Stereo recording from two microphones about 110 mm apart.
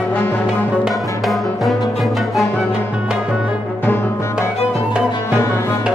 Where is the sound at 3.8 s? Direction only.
15° left (ahead or behind).